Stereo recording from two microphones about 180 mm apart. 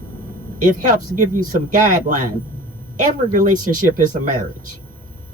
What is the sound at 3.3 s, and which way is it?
Speech, 45° right (ahead or behind).